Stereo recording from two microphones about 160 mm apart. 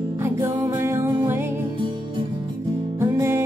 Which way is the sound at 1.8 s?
30° right (ahead or behind).